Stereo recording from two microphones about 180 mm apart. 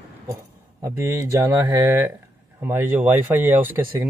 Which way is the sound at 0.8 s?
15° right (ahead or behind).